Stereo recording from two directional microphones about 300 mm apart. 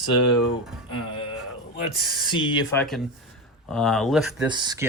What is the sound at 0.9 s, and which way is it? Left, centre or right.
Speech, centre.